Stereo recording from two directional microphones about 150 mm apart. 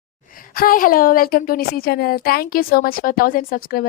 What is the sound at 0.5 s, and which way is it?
A woman's voice, 70° left (ahead or behind).